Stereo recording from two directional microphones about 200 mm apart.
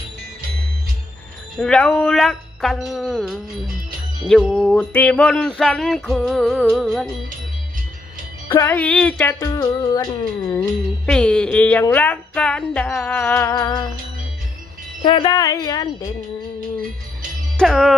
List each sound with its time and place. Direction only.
1.5 s a sound: 5° left (ahead or behind)
8.4 s speech: 10° left (ahead or behind)
9.4 s a woman's voice: 20° left (ahead or behind)
10.6 s speech: 5° left (ahead or behind)
15.0 s a woman's voice: 20° left (ahead or behind)
17.6 s a sound: centre (ahead or behind)